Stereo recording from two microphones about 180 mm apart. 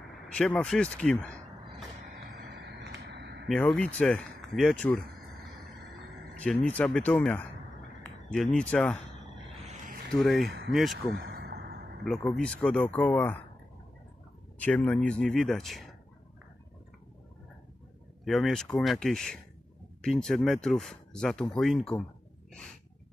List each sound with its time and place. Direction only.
0.3 s speech: 5° left (ahead or behind)
2.4 s a sound: 70° right (ahead or behind)
3.4 s speech: 5° left (ahead or behind)
6.3 s speech: 5° left (ahead or behind)
10.1 s speech: centre (ahead or behind)
11.1 s a sound: 65° right (ahead or behind)
12.0 s speech: 5° left (ahead or behind)
14.6 s speech: 10° left (ahead or behind)
18.2 s speech: centre (ahead or behind)